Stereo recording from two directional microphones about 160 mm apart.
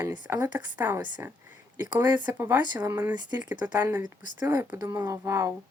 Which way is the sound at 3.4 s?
10° right (ahead or behind).